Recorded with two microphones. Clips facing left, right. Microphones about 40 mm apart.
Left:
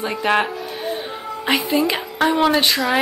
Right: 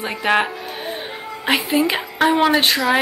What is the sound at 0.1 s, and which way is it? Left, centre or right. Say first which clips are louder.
A woman's voice: right 1 dB; centre.